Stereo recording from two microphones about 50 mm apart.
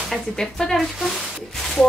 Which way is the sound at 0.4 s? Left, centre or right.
Centre.